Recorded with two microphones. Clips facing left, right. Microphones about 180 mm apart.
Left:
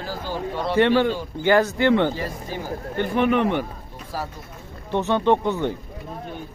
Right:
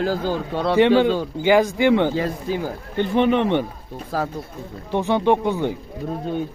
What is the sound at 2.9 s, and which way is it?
Speech, 25° right (ahead or behind).